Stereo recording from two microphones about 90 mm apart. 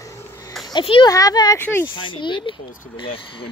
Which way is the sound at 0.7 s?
70° left (ahead or behind).